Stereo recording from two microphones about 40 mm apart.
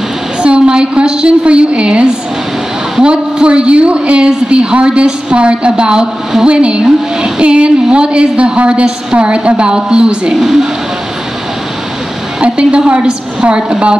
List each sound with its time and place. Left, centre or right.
0.4 s a woman's voice: right
6.8 s a woman's voice: centre
12.4 s a woman's voice: right